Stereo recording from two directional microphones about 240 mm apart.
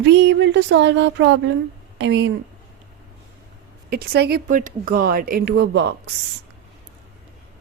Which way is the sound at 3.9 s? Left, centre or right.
Right.